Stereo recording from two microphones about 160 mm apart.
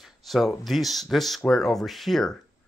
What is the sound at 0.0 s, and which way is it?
Speech, centre (ahead or behind).